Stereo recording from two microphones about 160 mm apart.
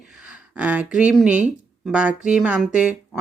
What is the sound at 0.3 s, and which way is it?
Speech, 5° right (ahead or behind).